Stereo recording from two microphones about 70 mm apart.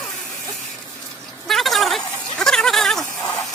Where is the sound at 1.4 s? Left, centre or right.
Centre.